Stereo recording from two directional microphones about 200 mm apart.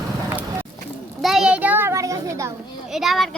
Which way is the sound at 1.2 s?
Centre (ahead or behind).